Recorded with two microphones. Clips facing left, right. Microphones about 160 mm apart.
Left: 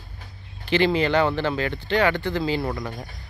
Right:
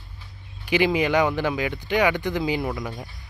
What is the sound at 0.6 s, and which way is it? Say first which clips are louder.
Speech: left 1 dB; 10° right (ahead or behind).